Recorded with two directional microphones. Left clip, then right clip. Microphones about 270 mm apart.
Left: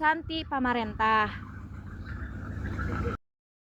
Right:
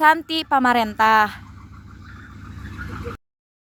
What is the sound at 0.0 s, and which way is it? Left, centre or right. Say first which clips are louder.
A woman's voice: right 11 dB; right.